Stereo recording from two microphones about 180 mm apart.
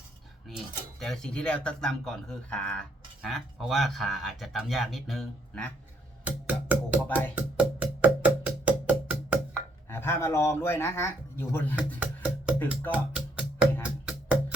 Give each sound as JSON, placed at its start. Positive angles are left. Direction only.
{"t": 0.4, "sound": "speech", "side_deg": 0}
{"t": 6.2, "sound": "music", "side_deg": -10}
{"t": 9.6, "sound": "speech", "side_deg": 10}
{"t": 11.9, "sound": "music", "side_deg": -5}